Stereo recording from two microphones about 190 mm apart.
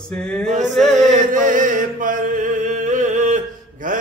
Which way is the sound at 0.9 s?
45° right (ahead or behind).